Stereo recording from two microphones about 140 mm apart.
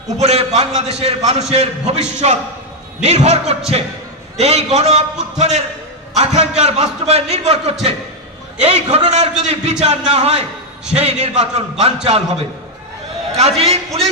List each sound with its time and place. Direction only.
0.2 s a man's voice: 50° right (ahead or behind)